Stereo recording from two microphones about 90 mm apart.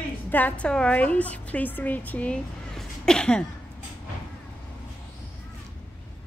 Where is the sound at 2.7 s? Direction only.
5° left (ahead or behind).